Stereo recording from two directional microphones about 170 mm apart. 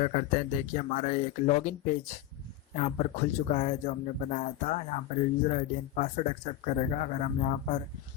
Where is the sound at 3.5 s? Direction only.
45° left (ahead or behind).